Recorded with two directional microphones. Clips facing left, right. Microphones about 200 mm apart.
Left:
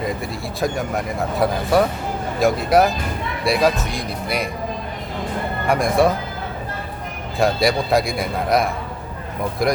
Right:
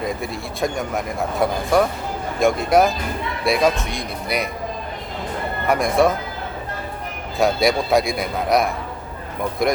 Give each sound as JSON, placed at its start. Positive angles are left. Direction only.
{"t": 0.0, "sound": "speech", "side_deg": 0}
{"t": 5.6, "sound": "speech", "side_deg": 0}
{"t": 7.3, "sound": "speech", "side_deg": 0}